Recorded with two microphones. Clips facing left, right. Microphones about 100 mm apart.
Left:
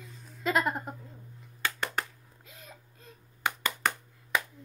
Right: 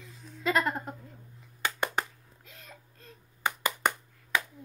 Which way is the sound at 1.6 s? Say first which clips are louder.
Right 2 dB; 15° right (ahead or behind).